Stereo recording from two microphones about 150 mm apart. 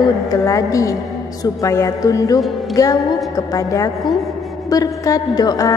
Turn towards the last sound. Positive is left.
turn(degrees=25)  # may be behind; listen again after turning